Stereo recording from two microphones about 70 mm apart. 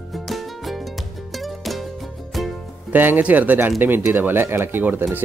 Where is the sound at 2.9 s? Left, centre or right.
Right.